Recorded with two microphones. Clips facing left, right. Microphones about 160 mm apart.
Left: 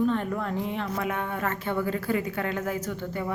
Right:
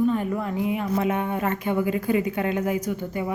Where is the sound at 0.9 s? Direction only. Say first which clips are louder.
Right 6 dB; 20° right (ahead or behind).